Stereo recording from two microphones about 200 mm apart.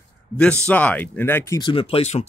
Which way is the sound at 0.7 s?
5° left (ahead or behind).